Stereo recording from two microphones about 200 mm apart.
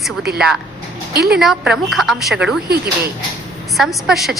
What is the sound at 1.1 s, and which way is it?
Speech, 50° right (ahead or behind).